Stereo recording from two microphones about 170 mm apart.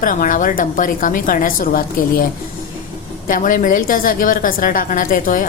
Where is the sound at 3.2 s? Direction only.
50° left (ahead or behind).